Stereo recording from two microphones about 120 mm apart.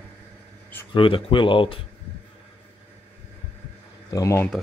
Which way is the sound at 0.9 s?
45° left (ahead or behind).